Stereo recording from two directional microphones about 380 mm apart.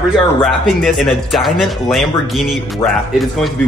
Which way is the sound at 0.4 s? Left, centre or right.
Centre.